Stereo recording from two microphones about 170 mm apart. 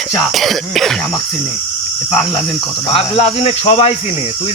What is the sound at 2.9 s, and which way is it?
Speech, 35° left (ahead or behind).